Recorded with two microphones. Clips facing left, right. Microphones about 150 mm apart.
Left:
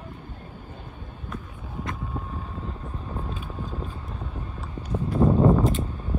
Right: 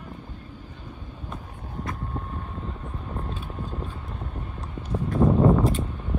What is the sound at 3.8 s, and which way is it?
Boat, centre (ahead or behind).